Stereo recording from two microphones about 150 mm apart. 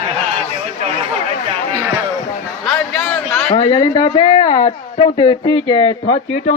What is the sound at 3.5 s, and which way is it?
A woman's voice, 30° left (ahead or behind).